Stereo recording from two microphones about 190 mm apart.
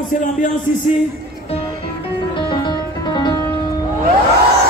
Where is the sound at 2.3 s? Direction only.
25° left (ahead or behind).